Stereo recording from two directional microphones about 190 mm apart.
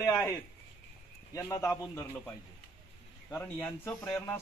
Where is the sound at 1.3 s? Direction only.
15° left (ahead or behind).